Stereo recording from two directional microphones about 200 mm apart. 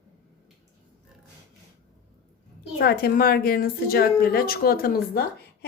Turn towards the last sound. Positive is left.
turn(degrees=50)  # may be behind; listen again after turning